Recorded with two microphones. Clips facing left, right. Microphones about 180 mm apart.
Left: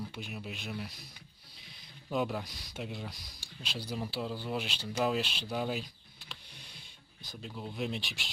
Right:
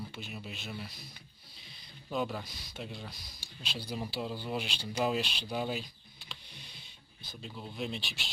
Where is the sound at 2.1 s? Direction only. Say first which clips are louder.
Left 2 dB; 5° left (ahead or behind).